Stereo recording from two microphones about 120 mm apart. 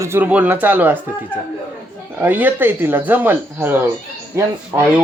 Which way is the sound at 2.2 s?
15° right (ahead or behind).